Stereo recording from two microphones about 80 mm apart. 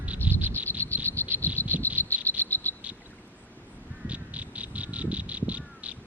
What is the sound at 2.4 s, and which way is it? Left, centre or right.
Frog, left.